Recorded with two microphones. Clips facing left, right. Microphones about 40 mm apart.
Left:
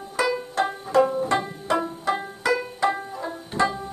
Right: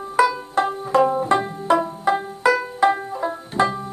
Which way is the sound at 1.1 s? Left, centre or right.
Right.